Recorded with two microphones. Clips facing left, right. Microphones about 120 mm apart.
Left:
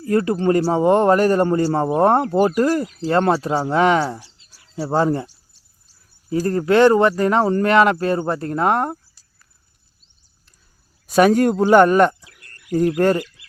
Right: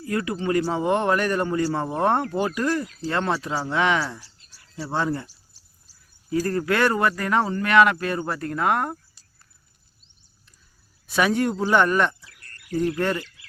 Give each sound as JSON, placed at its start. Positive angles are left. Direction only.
{"t": 0.0, "sound": "speech", "side_deg": 35}
{"t": 6.3, "sound": "speech", "side_deg": 25}
{"t": 11.0, "sound": "speech", "side_deg": 45}
{"t": 11.6, "sound": "speech", "side_deg": 35}